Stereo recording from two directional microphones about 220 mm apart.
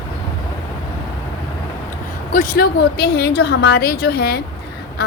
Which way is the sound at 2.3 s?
40° left (ahead or behind).